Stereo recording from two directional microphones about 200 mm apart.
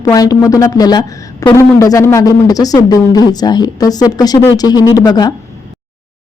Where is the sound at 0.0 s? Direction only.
20° left (ahead or behind).